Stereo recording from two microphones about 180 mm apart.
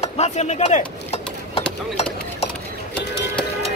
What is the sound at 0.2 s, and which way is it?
Speech, 40° left (ahead or behind).